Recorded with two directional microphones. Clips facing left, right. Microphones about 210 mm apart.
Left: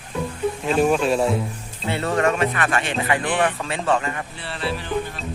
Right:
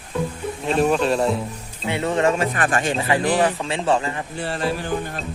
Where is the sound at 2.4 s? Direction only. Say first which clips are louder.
Right 1 dB; 35° right (ahead or behind).